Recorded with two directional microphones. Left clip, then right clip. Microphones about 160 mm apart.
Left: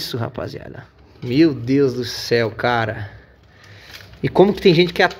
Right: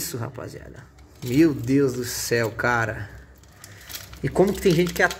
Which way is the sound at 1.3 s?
15° left (ahead or behind).